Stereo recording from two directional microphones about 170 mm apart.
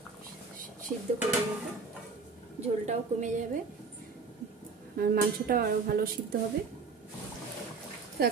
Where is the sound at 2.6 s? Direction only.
45° right (ahead or behind).